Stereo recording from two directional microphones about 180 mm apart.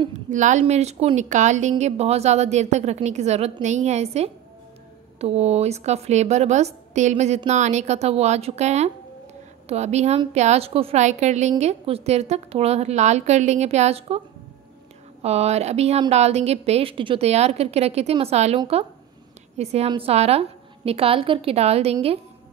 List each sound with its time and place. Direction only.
0.3 s a woman's voice: 40° right (ahead or behind)
15.2 s a woman's voice: 35° right (ahead or behind)